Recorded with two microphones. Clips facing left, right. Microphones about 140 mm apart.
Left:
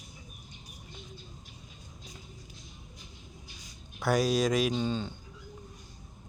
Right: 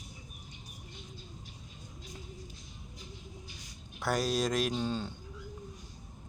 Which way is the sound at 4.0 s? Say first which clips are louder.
Left 4 dB; centre (ahead or behind).